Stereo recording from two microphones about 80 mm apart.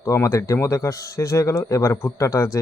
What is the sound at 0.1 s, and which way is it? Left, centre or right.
Speech, left.